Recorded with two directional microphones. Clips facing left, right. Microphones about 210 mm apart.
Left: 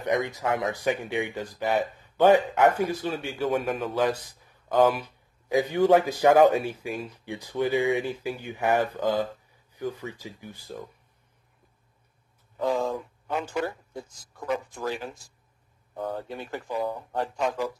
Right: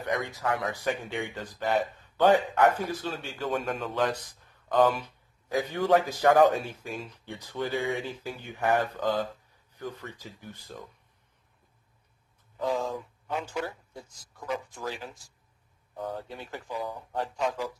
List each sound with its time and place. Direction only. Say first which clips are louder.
0.0 s speech: left 4 dB; 20° left (ahead or behind)
12.5 s speech: left 3 dB; 60° left (ahead or behind)